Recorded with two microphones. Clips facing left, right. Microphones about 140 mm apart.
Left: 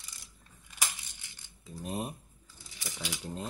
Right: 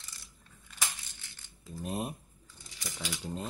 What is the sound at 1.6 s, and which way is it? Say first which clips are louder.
Speech: right 1 dB; centre (ahead or behind).